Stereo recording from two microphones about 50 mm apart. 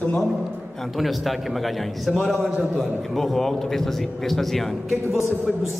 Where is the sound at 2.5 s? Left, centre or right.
Centre.